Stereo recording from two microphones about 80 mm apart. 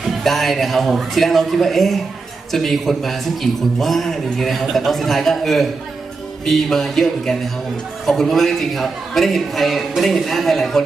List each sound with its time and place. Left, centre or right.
0.0 s a man's voice: centre